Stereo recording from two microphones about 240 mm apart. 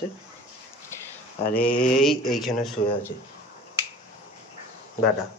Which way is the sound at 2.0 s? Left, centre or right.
Centre.